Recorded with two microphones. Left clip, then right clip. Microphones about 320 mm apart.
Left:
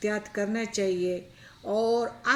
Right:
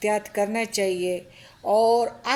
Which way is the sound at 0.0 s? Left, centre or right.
Centre.